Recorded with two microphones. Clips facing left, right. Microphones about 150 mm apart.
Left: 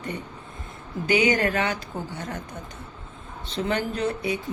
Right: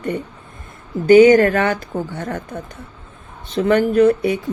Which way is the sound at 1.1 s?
45° right (ahead or behind).